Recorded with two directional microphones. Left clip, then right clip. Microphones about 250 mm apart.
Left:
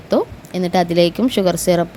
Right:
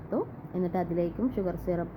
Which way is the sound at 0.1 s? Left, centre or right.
Left.